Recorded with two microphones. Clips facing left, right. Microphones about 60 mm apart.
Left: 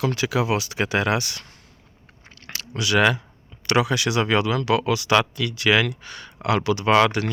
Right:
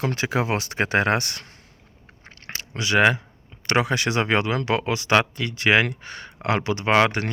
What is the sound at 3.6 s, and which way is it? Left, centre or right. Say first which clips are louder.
Speech: left 1 dB; right.